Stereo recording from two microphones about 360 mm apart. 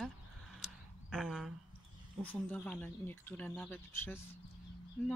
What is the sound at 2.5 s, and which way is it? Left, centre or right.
Speech, centre.